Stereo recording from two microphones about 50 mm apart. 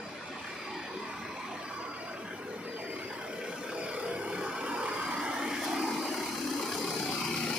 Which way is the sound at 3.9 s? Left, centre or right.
Right.